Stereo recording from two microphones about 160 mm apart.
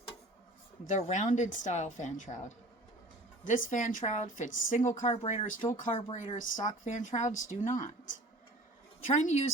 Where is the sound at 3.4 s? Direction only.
55° left (ahead or behind).